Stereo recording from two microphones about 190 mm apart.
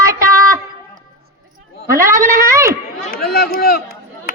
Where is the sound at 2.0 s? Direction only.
15° right (ahead or behind).